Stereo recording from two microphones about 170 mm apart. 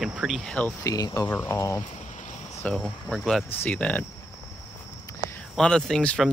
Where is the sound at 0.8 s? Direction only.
20° left (ahead or behind).